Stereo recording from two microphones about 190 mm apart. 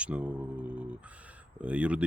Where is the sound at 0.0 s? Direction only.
5° right (ahead or behind).